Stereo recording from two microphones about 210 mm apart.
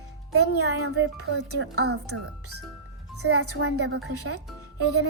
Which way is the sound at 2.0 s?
90° right.